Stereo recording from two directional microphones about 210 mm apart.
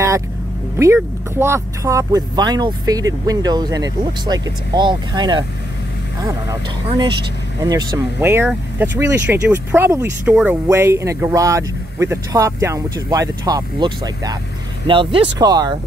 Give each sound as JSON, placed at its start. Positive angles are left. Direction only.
{"t": 0.9, "sound": "speech", "side_deg": -10}
{"t": 6.9, "sound": "speech", "side_deg": -20}